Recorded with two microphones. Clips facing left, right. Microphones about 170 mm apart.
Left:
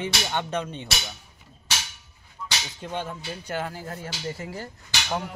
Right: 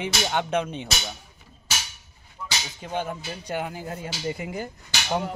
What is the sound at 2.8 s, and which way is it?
Speech, 10° right (ahead or behind).